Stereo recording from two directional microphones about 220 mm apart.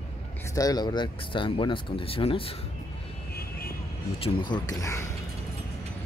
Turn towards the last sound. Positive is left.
turn(degrees=15)  # may be behind; listen again after turning